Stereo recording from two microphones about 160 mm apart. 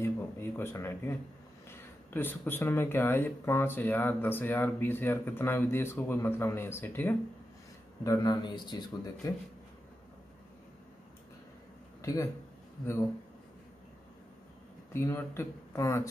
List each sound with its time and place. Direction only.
0.0 s a sound: 15° left (ahead or behind)
2.1 s a man's voice: 10° left (ahead or behind)
12.0 s speech: 20° left (ahead or behind)
14.9 s speech: 15° left (ahead or behind)